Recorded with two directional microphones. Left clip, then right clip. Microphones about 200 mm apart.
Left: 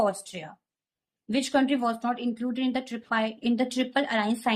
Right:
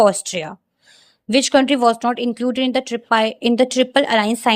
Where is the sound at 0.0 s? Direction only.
45° right (ahead or behind).